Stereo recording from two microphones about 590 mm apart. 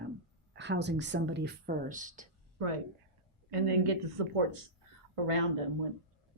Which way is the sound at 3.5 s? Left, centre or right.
Right.